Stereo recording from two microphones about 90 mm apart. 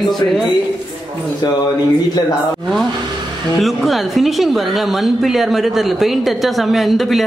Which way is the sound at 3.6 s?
Centre (ahead or behind).